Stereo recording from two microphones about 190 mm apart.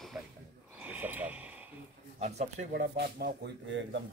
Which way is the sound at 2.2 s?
35° right (ahead or behind).